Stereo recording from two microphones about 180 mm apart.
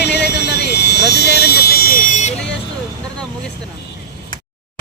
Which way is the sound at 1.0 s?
65° left (ahead or behind).